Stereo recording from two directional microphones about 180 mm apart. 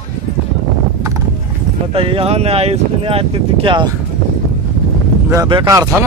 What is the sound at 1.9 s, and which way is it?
Speech, 30° right (ahead or behind).